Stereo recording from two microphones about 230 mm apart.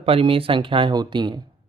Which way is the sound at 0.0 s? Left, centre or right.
Right.